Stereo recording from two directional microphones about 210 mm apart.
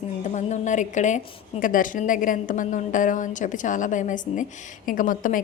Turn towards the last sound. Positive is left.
turn(degrees=40)  # may be behind; listen again after turning